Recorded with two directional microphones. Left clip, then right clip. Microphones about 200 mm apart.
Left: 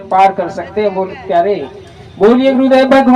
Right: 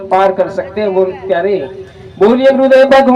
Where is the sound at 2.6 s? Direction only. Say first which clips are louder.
Right 3 dB; 35° right (ahead or behind).